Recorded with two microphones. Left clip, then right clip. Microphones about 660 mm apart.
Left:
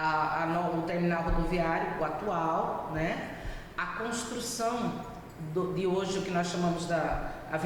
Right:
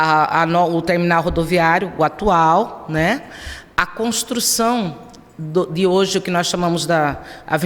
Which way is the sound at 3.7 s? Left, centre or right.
Right.